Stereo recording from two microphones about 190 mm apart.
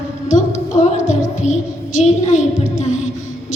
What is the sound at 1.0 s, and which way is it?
Music, 40° left (ahead or behind).